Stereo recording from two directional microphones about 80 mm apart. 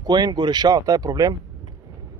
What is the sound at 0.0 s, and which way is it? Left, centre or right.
Speech, right.